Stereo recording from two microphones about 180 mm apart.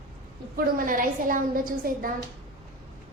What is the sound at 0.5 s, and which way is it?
A woman's voice, 50° right (ahead or behind).